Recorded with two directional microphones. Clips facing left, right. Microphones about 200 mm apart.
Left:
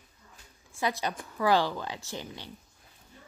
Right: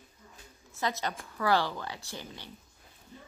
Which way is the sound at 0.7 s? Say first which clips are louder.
Left 2 dB; 15° left (ahead or behind).